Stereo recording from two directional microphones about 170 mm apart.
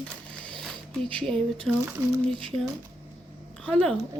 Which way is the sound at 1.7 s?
5° right (ahead or behind).